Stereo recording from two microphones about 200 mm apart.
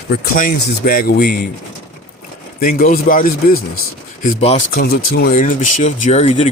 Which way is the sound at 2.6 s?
45° left (ahead or behind).